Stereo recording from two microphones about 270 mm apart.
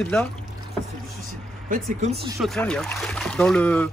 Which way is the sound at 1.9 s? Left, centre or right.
Right.